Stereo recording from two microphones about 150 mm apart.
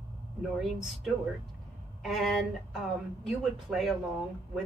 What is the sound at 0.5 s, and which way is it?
A woman's voice, centre (ahead or behind).